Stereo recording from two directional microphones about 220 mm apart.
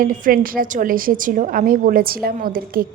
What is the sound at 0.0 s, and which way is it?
A woman's voice, 40° right (ahead or behind).